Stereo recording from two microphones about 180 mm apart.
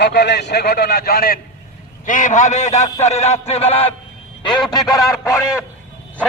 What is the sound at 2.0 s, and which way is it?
A man's voice, 45° left (ahead or behind).